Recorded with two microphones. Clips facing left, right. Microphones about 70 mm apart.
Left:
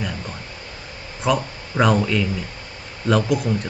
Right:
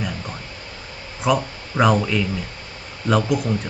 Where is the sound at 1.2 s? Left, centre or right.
Centre.